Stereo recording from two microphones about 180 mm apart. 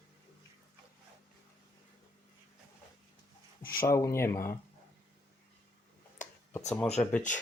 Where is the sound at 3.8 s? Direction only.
15° left (ahead or behind).